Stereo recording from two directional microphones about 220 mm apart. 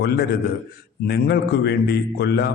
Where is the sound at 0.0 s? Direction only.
45° left (ahead or behind).